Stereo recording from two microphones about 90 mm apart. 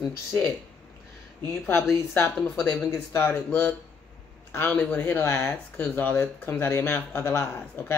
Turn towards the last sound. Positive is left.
turn(degrees=25)  # may be behind; listen again after turning